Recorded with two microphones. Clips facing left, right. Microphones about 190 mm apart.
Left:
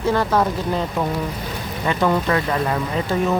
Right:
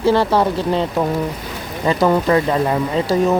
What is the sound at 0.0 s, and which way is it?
Speech, 30° right (ahead or behind).